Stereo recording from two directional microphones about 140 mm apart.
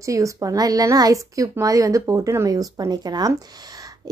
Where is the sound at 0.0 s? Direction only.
20° right (ahead or behind).